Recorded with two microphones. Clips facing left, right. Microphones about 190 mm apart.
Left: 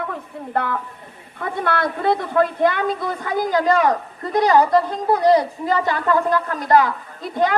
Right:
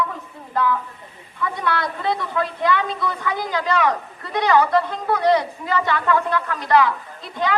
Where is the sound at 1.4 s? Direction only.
50° left (ahead or behind).